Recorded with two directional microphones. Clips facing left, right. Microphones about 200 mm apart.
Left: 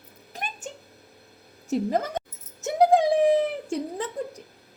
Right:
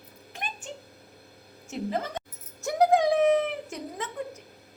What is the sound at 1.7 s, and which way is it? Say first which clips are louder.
Speech: left 6 dB; 45° left (ahead or behind).